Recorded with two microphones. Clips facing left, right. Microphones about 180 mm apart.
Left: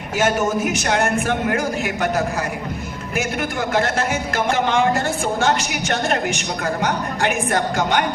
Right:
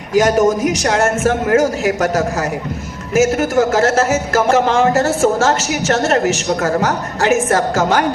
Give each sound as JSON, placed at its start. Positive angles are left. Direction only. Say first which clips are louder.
{"t": 0.1, "sound": "a man's voice", "louder": "right 7 dB", "side_deg": -40}
{"t": 5.5, "sound": "a woman's voice", "louder": "right 4 dB", "side_deg": -40}